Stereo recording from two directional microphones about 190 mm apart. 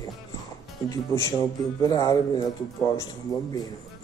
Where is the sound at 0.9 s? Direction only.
15° left (ahead or behind).